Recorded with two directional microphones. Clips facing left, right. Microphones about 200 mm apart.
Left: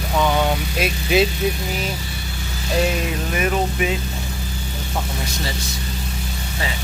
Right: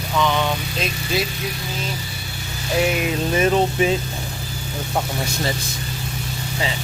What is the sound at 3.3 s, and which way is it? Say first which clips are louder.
Speech: right 4 dB; 30° right (ahead or behind).